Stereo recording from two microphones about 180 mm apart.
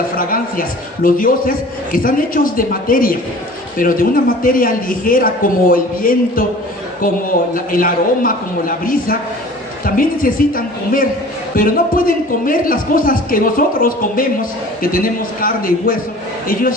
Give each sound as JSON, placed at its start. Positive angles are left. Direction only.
{"t": 0.2, "sound": "a man's voice", "side_deg": 50}